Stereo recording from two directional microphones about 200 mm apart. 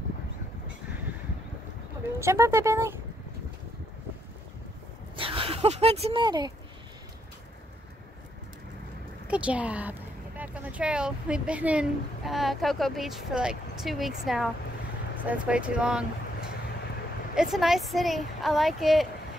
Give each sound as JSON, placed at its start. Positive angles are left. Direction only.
{"t": 2.1, "sound": "speech", "side_deg": -15}
{"t": 5.1, "sound": "speech", "side_deg": -25}
{"t": 9.3, "sound": "speech", "side_deg": -5}
{"t": 17.4, "sound": "speech", "side_deg": 0}